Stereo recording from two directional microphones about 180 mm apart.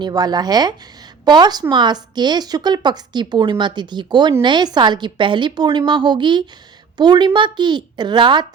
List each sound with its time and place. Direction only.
0.0 s a woman's voice: 20° right (ahead or behind)